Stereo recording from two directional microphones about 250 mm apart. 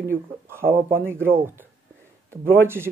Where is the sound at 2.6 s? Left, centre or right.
Centre.